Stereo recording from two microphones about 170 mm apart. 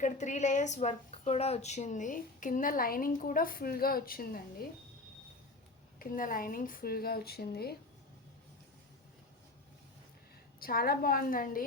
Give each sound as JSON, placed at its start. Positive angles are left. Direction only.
{"t": 0.0, "sound": "a woman's voice", "side_deg": 45}
{"t": 6.0, "sound": "speech", "side_deg": 55}
{"t": 10.6, "sound": "speech", "side_deg": 60}